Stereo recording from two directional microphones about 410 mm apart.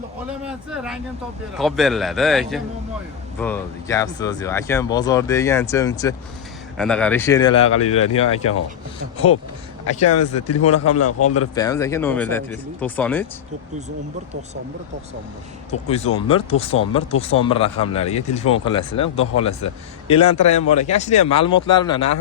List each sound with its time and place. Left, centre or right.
0.3 s a man's voice: centre
10.0 s speech: left
11.5 s a man's voice: centre
15.7 s speech: centre